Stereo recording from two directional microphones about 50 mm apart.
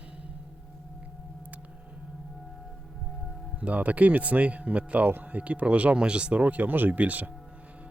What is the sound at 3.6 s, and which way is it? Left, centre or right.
Speech, right.